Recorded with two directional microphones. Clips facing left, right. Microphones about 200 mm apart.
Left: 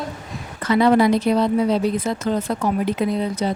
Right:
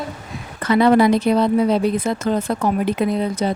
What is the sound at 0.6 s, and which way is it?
A woman's voice, 60° right (ahead or behind).